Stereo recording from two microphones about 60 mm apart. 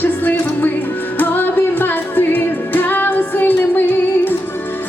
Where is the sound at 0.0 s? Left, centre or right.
Left.